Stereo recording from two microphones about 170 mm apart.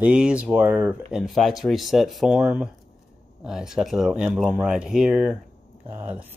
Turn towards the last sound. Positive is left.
turn(degrees=-10)  # may be behind; listen again after turning